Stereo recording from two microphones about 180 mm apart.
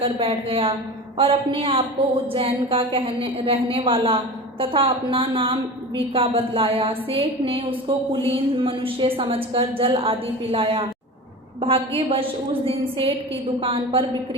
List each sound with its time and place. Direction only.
0.0 s a woman's voice: 30° right (ahead or behind)